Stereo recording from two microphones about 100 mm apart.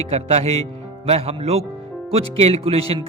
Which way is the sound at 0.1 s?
90° right.